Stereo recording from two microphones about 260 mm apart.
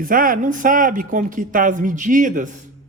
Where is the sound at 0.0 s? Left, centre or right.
Right.